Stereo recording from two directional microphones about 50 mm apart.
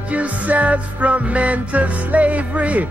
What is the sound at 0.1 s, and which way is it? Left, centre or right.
Music, right.